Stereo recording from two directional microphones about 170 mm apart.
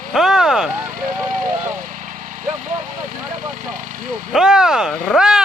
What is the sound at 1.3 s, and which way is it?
Speech, 50° right (ahead or behind).